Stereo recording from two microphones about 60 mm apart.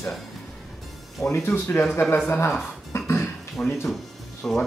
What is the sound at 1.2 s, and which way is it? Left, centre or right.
Speech, left.